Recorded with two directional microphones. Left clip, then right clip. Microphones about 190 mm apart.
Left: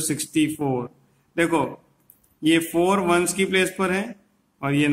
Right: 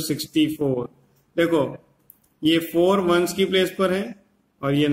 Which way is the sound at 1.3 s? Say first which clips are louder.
Right 1 dB; 20° left (ahead or behind).